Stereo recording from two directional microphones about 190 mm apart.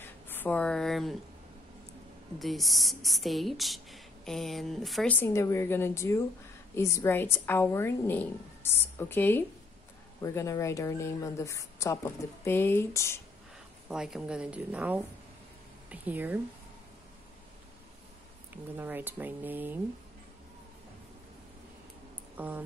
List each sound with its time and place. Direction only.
0.3 s a woman's voice: 10° left (ahead or behind)
2.3 s speech: centre (ahead or behind)
5.2 s a woman's voice: 15° left (ahead or behind)
13.8 s speech: 5° right (ahead or behind)
18.5 s speech: 10° right (ahead or behind)
22.4 s speech: 10° right (ahead or behind)